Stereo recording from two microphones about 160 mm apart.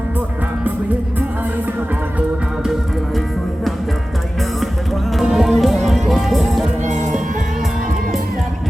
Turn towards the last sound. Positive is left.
turn(degrees=-50)  # may be behind; listen again after turning